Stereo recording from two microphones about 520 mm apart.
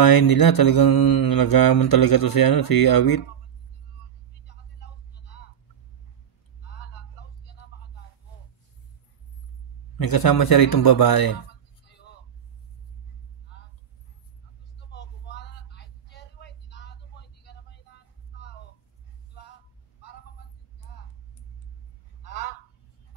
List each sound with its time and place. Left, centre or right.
0.0 s mantra: left
4.5 s vehicle: centre
9.9 s a man's voice: left
14.9 s vehicle: centre
22.2 s honk: centre